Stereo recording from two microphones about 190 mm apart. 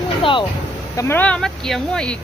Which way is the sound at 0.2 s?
25° left (ahead or behind).